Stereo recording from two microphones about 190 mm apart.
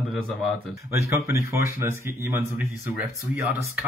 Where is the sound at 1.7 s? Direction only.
15° right (ahead or behind).